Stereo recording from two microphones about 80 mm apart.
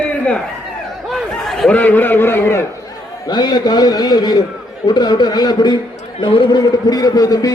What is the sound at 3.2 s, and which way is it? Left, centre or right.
A man's voice, left.